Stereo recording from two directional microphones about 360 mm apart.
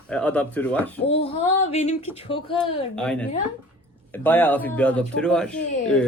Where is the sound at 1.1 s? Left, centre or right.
Centre.